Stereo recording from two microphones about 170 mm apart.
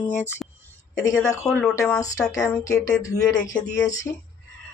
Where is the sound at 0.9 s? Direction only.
20° left (ahead or behind).